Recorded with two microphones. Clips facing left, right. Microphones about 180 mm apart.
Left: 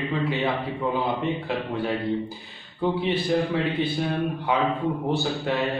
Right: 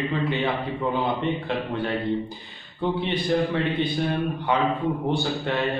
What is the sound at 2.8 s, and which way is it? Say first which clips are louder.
A man's voice: left 1 dB; 5° left (ahead or behind).